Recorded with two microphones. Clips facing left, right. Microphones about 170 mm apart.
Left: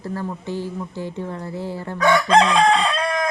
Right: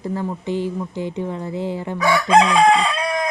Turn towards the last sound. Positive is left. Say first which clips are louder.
# even
turn(degrees=-10)  # may be behind; listen again after turning